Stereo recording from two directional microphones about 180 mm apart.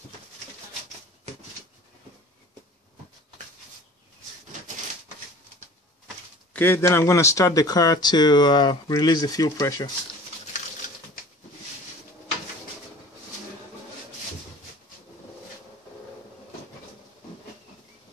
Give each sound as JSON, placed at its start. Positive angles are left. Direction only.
{"t": 6.5, "sound": "speech", "side_deg": 10}